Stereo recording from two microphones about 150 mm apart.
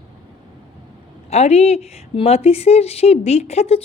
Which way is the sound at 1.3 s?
45° left (ahead or behind).